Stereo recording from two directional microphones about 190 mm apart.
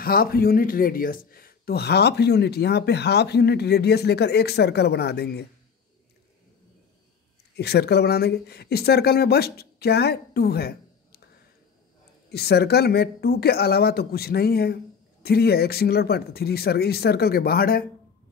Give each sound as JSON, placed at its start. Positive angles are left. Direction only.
{"t": 0.0, "sound": "speech", "side_deg": 50}
{"t": 7.5, "sound": "speech", "side_deg": 60}
{"t": 12.3, "sound": "speech", "side_deg": 55}